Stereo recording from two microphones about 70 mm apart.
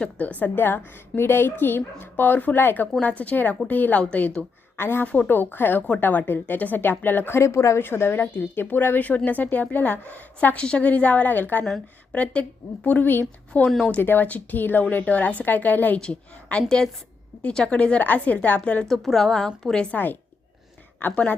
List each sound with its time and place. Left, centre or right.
0.0 s speech: left
4.8 s speech: left
5.0 s speech: left
7.8 s speech: left
13.7 s a woman's voice: centre
13.9 s speech: left
16.0 s a woman's voice: centre
18.9 s a woman's voice: centre
21.0 s speech: left